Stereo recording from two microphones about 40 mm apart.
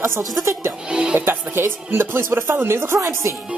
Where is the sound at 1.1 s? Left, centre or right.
Right.